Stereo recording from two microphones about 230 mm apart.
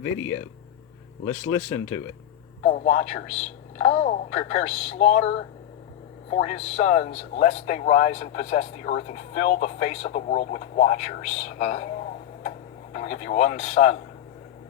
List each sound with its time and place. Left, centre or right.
0.0 s speech: left
2.6 s speech: left
6.3 s speech: left
12.4 s tick-tock: left